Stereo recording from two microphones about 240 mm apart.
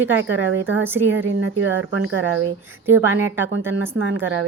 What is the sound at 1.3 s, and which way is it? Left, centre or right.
Speech, right.